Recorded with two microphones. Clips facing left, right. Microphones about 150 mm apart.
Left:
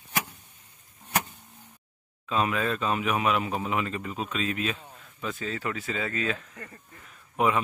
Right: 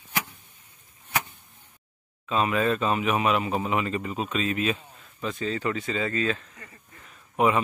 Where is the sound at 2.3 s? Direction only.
Centre (ahead or behind).